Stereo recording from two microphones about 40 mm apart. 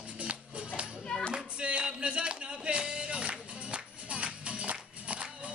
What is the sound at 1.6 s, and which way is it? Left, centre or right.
Music, right.